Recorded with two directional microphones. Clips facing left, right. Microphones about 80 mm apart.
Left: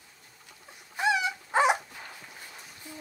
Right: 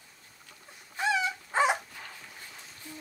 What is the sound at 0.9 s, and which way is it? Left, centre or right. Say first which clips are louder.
Dog: left 2 dB; centre.